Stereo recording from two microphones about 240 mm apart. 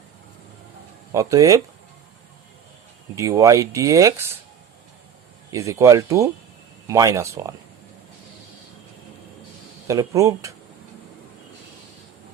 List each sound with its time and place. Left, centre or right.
1.1 s speech: centre
3.2 s speech: centre
5.5 s speech: centre
9.8 s speech: centre